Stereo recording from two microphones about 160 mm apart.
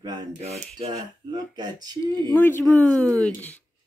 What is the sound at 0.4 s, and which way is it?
Speech, 40° right (ahead or behind).